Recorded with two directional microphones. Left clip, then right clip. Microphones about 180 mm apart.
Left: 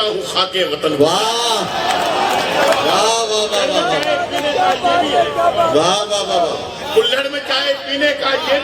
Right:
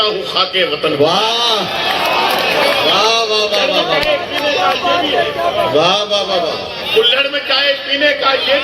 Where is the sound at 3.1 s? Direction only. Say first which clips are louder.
Right 3 dB; 40° left (ahead or behind).